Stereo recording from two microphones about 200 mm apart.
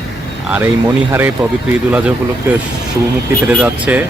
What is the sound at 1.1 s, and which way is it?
Speech, 10° right (ahead or behind).